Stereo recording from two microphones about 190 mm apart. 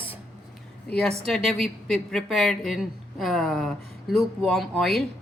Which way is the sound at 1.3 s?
Centre (ahead or behind).